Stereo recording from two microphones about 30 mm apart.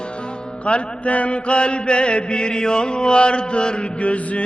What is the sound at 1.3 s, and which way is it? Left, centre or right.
Chant, left.